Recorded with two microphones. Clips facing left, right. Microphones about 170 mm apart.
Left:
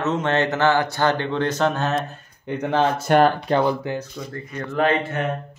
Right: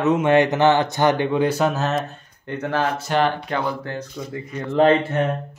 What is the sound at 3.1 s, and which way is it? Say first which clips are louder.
Speech: left 5 dB; 55° left (ahead or behind).